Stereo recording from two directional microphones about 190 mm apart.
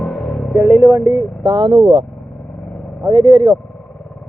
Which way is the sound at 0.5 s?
15° right (ahead or behind).